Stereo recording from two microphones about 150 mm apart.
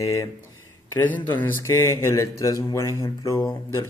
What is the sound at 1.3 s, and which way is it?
A man's voice, 15° left (ahead or behind).